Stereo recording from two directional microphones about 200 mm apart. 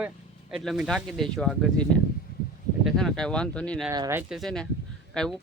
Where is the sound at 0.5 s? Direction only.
Centre (ahead or behind).